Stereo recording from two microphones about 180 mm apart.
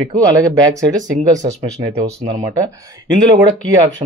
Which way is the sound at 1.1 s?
40° right (ahead or behind).